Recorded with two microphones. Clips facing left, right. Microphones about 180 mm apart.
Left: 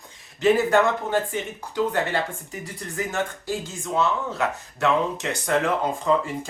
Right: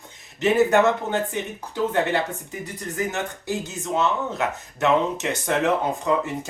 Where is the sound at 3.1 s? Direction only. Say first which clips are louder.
Even; 20° right (ahead or behind).